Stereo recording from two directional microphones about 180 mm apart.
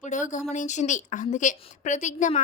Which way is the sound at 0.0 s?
45° left (ahead or behind).